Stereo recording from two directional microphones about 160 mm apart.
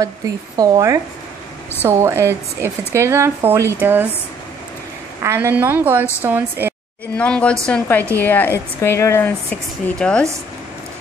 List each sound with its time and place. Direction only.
0.6 s speech: 20° right (ahead or behind)
5.2 s speech: 15° right (ahead or behind)
7.2 s speech: 10° left (ahead or behind)